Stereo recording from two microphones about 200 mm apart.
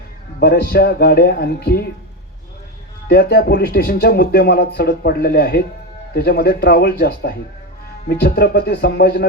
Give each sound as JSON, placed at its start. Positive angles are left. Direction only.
{"t": 0.3, "sound": "speech", "side_deg": 50}
{"t": 3.1, "sound": "speech", "side_deg": 55}